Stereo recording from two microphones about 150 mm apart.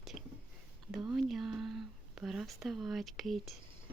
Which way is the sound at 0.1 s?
45° left (ahead or behind).